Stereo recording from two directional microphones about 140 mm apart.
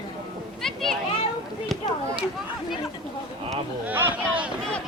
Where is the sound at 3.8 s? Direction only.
15° right (ahead or behind).